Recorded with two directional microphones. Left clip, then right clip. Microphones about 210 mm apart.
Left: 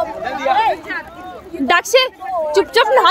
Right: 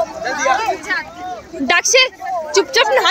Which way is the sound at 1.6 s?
10° left (ahead or behind).